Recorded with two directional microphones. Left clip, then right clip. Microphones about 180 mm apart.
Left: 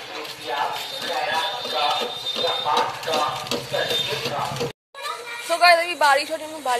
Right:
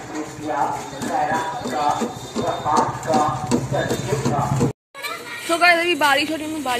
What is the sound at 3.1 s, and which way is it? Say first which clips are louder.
Speech: right 5 dB; centre (ahead or behind).